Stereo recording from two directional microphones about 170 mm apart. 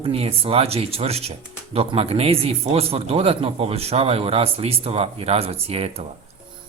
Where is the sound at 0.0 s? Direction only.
35° right (ahead or behind).